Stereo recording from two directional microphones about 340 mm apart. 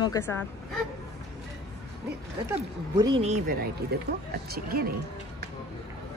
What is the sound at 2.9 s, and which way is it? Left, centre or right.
Speech, centre.